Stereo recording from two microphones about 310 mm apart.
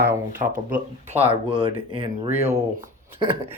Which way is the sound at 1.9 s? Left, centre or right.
Centre.